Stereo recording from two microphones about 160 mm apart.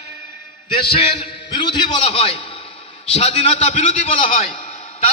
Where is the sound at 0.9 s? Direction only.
35° left (ahead or behind).